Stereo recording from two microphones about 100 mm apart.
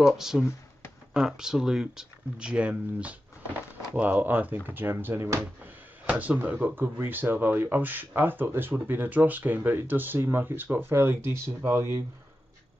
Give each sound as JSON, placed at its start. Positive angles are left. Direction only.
{"t": 0.0, "sound": "speech", "side_deg": -5}
{"t": 6.0, "sound": "speech", "side_deg": -15}